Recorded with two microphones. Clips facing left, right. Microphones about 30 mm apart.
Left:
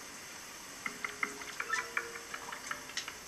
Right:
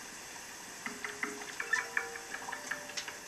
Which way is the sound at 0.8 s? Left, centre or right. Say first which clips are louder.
Left 1 dB; centre.